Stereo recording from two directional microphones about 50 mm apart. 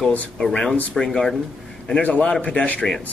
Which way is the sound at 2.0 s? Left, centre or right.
Left.